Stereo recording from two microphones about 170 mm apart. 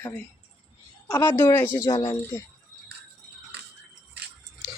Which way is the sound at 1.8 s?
30° left (ahead or behind).